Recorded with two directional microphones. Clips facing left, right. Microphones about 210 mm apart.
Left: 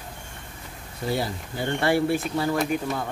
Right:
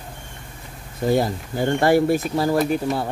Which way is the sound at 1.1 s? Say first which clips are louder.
Right 7 dB; 45° right (ahead or behind).